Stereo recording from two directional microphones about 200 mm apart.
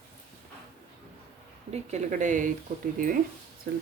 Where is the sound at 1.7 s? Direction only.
35° right (ahead or behind).